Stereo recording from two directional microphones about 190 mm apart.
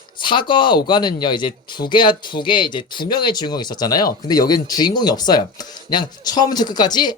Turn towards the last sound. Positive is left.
turn(degrees=20)  # may be behind; listen again after turning